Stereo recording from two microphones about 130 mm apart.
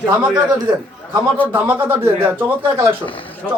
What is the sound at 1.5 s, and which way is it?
Speech, 15° right (ahead or behind).